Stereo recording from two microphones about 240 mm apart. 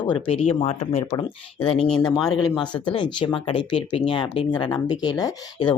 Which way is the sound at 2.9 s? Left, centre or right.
Centre.